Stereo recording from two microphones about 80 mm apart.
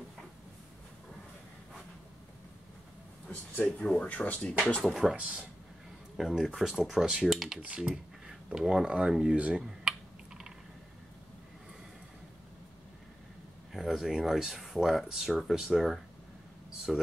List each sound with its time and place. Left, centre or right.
3.5 s speech: centre
4.9 s speech: centre
7.6 s speech: centre
9.4 s computer keyboard: centre
13.7 s speech: centre